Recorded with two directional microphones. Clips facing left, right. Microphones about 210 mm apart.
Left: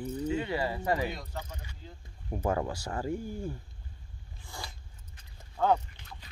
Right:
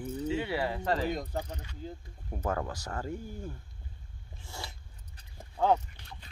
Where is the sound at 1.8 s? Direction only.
45° right (ahead or behind).